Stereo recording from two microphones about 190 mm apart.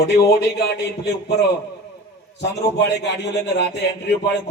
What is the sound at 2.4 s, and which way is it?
A man's voice, 65° left (ahead or behind).